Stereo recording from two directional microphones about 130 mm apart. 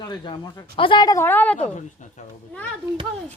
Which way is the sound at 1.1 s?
15° left (ahead or behind).